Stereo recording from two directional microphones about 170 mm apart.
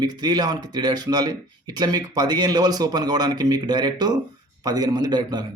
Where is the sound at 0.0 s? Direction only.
25° right (ahead or behind).